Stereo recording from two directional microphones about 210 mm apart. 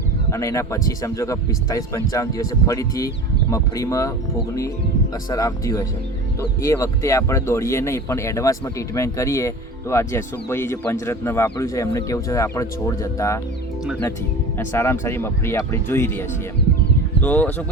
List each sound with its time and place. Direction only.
0.3 s speech: 15° left (ahead or behind)
5.3 s speech: 15° left (ahead or behind)
14.6 s speech: 10° left (ahead or behind)